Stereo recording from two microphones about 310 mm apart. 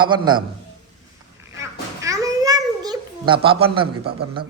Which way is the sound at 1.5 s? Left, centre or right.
Centre.